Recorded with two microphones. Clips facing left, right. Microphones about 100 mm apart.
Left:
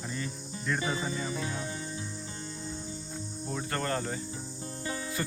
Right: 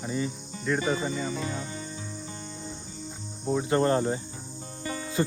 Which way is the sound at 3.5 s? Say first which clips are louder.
Right 10 dB; 20° right (ahead or behind).